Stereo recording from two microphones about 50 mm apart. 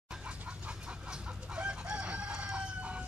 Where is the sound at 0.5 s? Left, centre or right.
Right.